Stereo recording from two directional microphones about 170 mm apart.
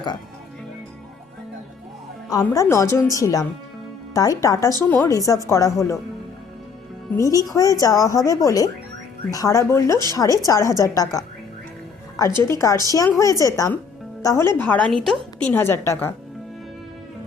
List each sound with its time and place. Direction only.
2.4 s a woman's voice: 15° left (ahead or behind)
7.1 s a woman's voice: 20° left (ahead or behind)
12.4 s a woman's voice: 20° left (ahead or behind)